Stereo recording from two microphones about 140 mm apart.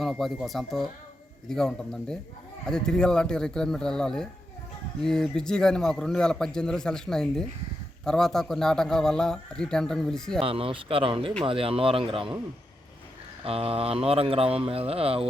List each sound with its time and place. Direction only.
0.0 s speech: centre (ahead or behind)
10.4 s speech: 40° right (ahead or behind)
13.4 s speech: 45° right (ahead or behind)